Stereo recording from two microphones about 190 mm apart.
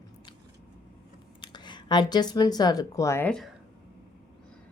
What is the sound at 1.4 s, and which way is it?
Speech, 25° left (ahead or behind).